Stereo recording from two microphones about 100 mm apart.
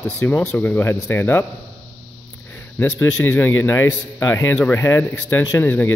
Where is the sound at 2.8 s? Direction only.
20° left (ahead or behind).